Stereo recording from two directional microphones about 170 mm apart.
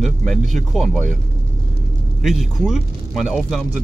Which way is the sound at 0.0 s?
Centre (ahead or behind).